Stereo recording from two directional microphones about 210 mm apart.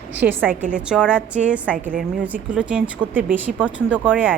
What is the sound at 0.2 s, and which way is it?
A woman's voice, 10° right (ahead or behind).